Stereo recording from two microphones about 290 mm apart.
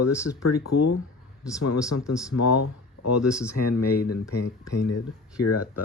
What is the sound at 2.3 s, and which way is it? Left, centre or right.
Speech, left.